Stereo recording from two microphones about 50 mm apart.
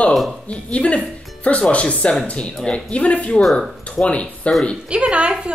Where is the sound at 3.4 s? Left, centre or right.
Centre.